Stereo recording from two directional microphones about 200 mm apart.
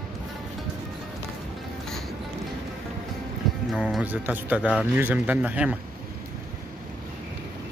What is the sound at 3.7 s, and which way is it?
Speech, 5° right (ahead or behind).